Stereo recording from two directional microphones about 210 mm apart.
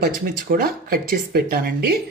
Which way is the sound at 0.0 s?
40° right (ahead or behind).